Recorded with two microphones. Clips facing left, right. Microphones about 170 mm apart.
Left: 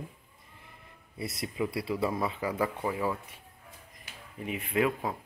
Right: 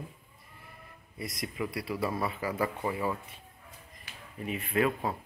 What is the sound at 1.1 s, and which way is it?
Speech, 30° left (ahead or behind).